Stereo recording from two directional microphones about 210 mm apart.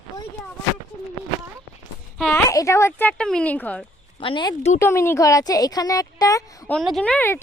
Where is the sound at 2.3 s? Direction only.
15° left (ahead or behind).